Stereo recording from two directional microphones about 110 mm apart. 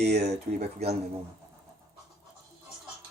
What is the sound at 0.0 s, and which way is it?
Speech, 85° right.